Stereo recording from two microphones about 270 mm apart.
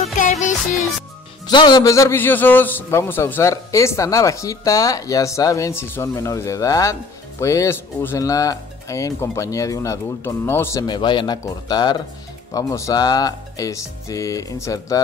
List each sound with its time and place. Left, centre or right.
0.2 s music: left
1.5 s a man's voice: centre